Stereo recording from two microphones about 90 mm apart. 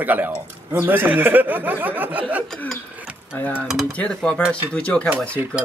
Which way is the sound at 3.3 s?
20° left (ahead or behind).